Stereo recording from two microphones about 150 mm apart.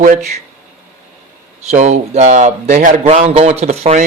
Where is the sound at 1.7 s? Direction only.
50° right (ahead or behind).